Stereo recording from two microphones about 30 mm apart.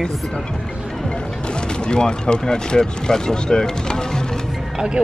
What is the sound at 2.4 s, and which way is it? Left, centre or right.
Speech, left.